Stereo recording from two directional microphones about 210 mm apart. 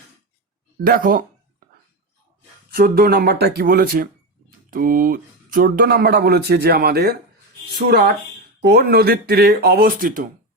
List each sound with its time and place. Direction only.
0.9 s speech: 40° right (ahead or behind)
2.7 s speech: 45° right (ahead or behind)